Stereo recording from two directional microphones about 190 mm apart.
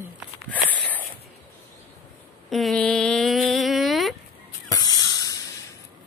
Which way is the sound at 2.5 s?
Centre (ahead or behind).